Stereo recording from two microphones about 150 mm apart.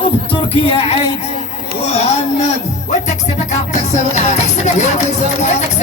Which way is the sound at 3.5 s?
50° left (ahead or behind).